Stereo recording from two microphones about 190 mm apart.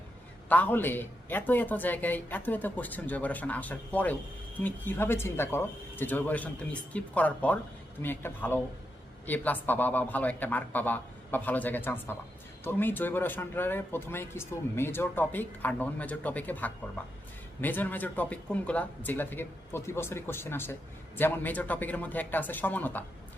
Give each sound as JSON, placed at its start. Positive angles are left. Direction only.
{"t": 0.4, "sound": "a man's voice", "side_deg": 10}